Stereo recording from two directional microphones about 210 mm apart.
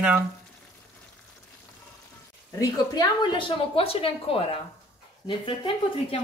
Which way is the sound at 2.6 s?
20° left (ahead or behind).